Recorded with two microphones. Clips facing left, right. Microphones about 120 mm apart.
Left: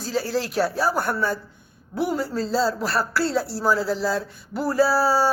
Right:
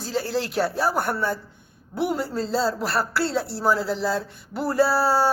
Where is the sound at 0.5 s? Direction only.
20° right (ahead or behind).